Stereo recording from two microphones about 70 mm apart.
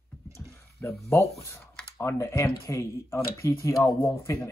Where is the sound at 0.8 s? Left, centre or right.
Left.